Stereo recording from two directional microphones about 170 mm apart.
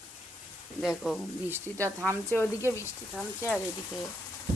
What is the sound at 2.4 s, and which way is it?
Speech, 15° left (ahead or behind).